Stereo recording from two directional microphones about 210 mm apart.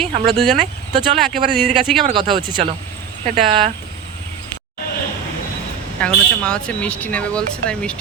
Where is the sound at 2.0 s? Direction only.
25° right (ahead or behind).